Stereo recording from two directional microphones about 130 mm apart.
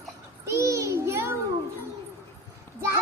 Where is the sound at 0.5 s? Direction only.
20° right (ahead or behind).